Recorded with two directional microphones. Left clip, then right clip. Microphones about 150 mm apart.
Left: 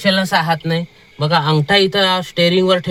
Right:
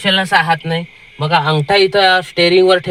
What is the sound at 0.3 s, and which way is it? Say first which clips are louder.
Speech: right 3 dB; 10° right (ahead or behind).